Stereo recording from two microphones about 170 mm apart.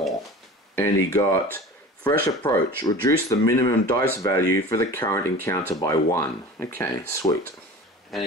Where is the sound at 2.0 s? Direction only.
20° left (ahead or behind).